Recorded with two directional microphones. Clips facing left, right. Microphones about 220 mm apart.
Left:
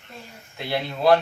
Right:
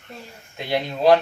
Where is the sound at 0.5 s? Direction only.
15° right (ahead or behind).